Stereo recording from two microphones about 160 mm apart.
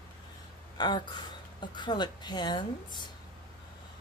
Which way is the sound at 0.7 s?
25° left (ahead or behind).